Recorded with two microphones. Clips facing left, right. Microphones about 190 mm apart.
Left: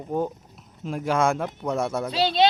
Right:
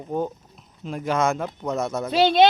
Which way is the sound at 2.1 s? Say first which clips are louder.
Right 6 dB; 50° right (ahead or behind).